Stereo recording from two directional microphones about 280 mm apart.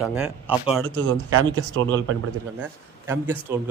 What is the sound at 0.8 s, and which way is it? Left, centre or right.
Speech, right.